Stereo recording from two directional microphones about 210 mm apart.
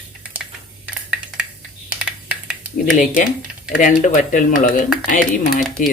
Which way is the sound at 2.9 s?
40° left (ahead or behind).